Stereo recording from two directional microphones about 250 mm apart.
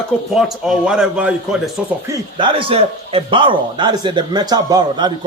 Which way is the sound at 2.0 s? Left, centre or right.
Centre.